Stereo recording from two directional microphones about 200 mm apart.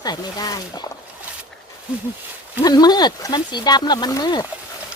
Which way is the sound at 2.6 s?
20° left (ahead or behind).